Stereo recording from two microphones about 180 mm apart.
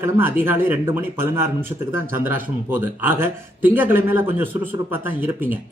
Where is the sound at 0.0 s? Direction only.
10° right (ahead or behind).